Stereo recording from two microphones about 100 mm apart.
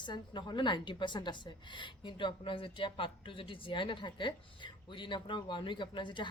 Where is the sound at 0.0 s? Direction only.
50° left (ahead or behind).